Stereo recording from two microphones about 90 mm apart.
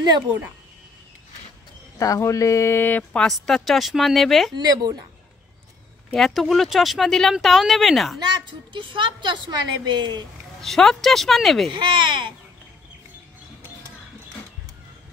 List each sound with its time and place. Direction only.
2.0 s speech: 35° left (ahead or behind); by 3.2 s 20° left (ahead or behind)
3.2 s speech: 5° left (ahead or behind)
4.6 s a woman's voice: 50° right (ahead or behind)
6.1 s speech: centre (ahead or behind)
8.2 s a woman's voice: 60° right (ahead or behind)
10.6 s speech: 5° left (ahead or behind)
11.7 s a woman's voice: 60° right (ahead or behind)